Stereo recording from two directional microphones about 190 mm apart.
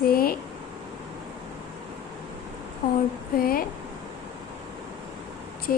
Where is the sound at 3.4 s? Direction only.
50° left (ahead or behind).